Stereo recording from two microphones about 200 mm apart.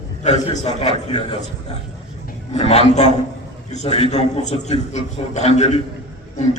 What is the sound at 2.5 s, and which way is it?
A man's voice, 30° left (ahead or behind).